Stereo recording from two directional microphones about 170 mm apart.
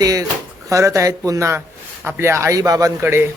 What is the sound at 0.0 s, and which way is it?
Speech, 20° right (ahead or behind).